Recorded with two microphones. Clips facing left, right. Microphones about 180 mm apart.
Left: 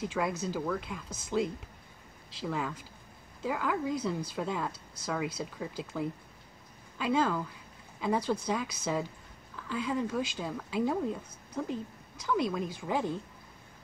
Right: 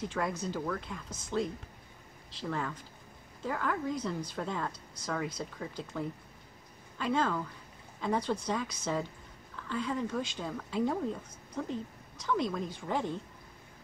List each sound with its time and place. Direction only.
0.0 s speech: 5° left (ahead or behind)